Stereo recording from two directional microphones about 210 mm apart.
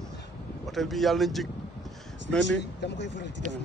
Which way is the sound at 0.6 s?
Centre (ahead or behind).